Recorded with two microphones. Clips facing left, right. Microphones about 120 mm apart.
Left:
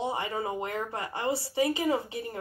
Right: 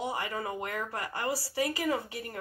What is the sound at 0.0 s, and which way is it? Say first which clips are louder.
A woman's voice: left 3 dB; 25° left (ahead or behind).